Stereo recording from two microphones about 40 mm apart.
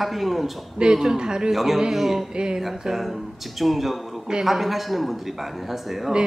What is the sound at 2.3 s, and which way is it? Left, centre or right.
Speech, right.